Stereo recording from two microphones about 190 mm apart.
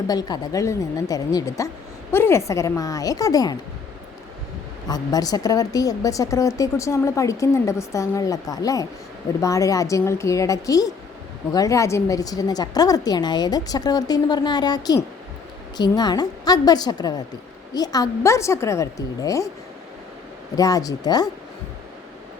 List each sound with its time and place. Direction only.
0.1 s a woman's voice: 20° left (ahead or behind)
4.9 s a woman's voice: 20° left (ahead or behind)
20.6 s a woman's voice: 20° left (ahead or behind)